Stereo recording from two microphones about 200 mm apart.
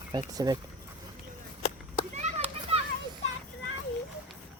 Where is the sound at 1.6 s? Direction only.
30° left (ahead or behind).